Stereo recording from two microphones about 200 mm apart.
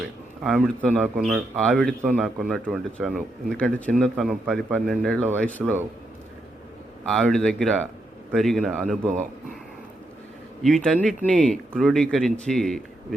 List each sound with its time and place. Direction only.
0.4 s speech: centre (ahead or behind)
7.1 s speech: centre (ahead or behind)
9.0 s speech: 35° right (ahead or behind)
10.6 s speech: 5° left (ahead or behind)